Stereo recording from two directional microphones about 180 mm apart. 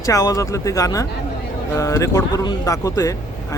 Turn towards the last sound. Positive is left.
turn(degrees=15)  # may be behind; listen again after turning